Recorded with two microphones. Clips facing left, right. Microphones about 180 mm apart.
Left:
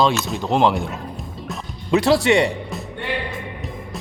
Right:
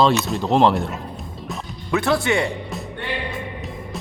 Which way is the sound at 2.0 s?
35° left (ahead or behind).